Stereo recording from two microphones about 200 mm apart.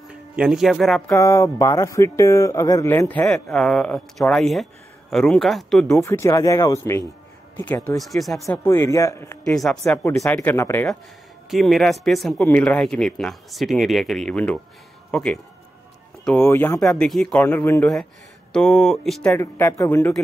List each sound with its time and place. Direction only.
0.1 s speech: 5° right (ahead or behind)
1.0 s speech: 15° left (ahead or behind)
5.9 s speech: 15° left (ahead or behind)
8.0 s speech: centre (ahead or behind)
8.5 s speech: 15° left (ahead or behind)
9.8 s speech: 15° left (ahead or behind)
16.4 s speech: 10° left (ahead or behind)